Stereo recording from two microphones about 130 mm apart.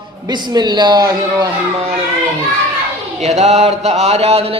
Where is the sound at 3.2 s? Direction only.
60° right (ahead or behind).